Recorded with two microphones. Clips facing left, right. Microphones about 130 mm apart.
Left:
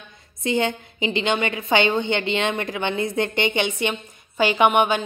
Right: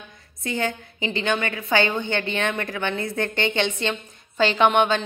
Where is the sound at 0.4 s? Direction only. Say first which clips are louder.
Left 4 dB; 20° left (ahead or behind).